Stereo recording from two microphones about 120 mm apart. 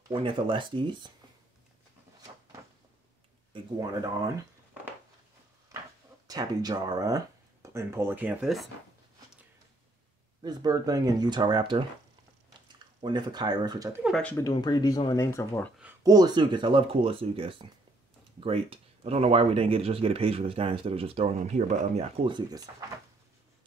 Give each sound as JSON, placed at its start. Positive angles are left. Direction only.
{"t": 0.1, "sound": "speech", "side_deg": -45}
{"t": 3.5, "sound": "speech", "side_deg": -35}
{"t": 6.2, "sound": "speech", "side_deg": -30}
{"t": 10.4, "sound": "speech", "side_deg": -35}
{"t": 14.4, "sound": "speech", "side_deg": 35}
{"t": 16.0, "sound": "speech", "side_deg": -35}